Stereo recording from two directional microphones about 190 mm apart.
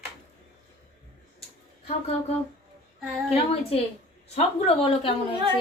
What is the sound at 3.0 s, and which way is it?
Speech, centre (ahead or behind).